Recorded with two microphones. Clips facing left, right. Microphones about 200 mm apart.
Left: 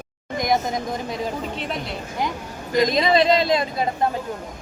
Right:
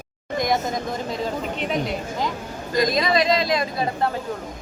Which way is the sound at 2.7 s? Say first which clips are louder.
Left 2 dB; 25° left (ahead or behind).